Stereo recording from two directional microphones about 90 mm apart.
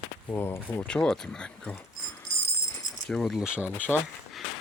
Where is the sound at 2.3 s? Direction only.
90° left.